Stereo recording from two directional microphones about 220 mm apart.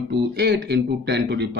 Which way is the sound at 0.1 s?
50° right (ahead or behind).